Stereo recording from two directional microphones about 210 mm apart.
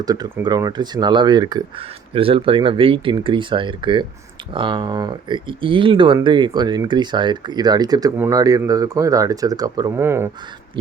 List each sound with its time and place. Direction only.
0.0 s speech: 20° right (ahead or behind)